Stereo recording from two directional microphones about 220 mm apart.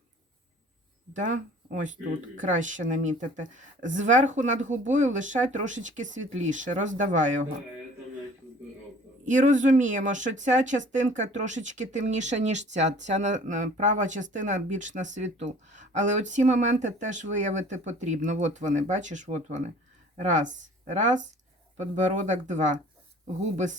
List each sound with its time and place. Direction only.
1.1 s speech: 35° right (ahead or behind)
9.2 s speech: 35° right (ahead or behind)
22.3 s speech: 35° right (ahead or behind)